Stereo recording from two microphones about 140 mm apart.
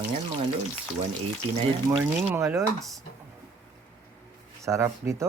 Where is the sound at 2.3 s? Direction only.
20° right (ahead or behind).